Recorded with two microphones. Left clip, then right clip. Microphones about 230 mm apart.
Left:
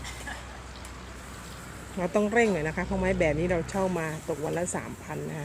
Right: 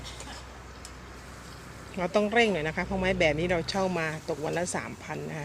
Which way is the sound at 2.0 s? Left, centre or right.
Centre.